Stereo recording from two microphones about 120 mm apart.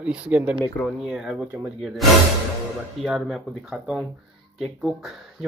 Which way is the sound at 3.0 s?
5° right (ahead or behind).